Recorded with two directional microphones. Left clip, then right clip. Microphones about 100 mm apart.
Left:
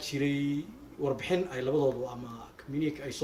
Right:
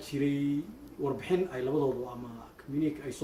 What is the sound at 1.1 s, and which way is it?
Speech, 20° right (ahead or behind).